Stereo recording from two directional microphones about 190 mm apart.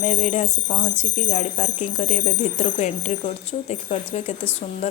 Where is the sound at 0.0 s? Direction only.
35° left (ahead or behind).